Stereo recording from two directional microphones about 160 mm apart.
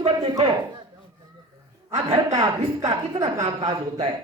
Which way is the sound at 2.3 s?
20° right (ahead or behind).